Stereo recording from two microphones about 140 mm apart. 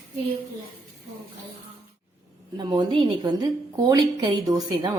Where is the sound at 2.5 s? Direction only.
30° right (ahead or behind).